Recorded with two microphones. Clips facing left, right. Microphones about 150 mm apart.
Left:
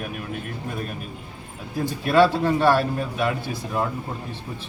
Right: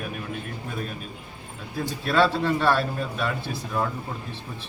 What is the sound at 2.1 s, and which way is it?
Speech, 15° left (ahead or behind).